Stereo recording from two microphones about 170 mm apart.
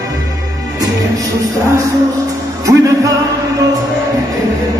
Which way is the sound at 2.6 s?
20° right (ahead or behind).